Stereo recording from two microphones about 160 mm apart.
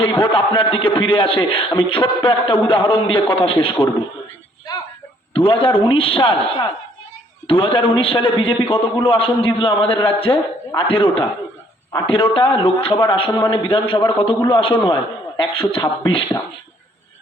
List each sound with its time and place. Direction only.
0.0 s a man's voice: 30° left (ahead or behind)
4.7 s a sound: 25° left (ahead or behind)
5.3 s a man's voice: 35° left (ahead or behind)
7.4 s a man's voice: 35° left (ahead or behind)